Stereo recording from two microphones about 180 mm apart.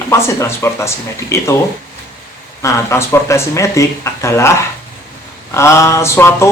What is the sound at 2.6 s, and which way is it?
Speech, 15° left (ahead or behind).